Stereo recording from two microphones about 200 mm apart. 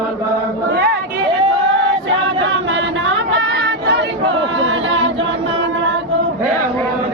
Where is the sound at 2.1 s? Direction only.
75° right (ahead or behind).